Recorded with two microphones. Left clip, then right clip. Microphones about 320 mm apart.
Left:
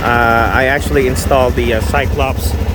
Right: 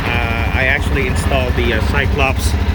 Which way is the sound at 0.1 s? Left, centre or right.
Centre.